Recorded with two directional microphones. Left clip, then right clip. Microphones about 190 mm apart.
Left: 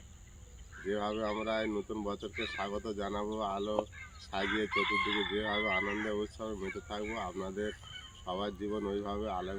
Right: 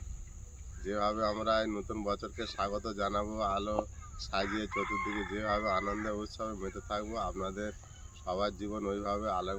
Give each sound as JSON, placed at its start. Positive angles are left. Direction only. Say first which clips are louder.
{"t": 0.9, "sound": "speech", "louder": "right 3 dB", "side_deg": -20}
{"t": 4.7, "sound": "chicken", "louder": "left 3 dB", "side_deg": 15}
{"t": 5.4, "sound": "speech", "louder": "right 1 dB", "side_deg": -25}